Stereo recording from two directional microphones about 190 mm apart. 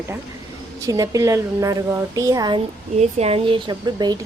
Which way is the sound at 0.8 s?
15° right (ahead or behind).